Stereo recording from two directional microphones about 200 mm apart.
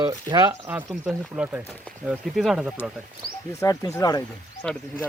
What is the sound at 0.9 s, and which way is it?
Speech, 5° right (ahead or behind).